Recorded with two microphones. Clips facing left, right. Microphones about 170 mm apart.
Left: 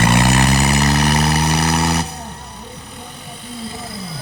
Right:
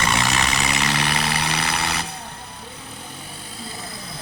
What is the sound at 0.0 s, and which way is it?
Vehicle, 55° left (ahead or behind).